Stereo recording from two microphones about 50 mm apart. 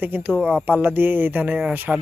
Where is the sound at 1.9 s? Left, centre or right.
Centre.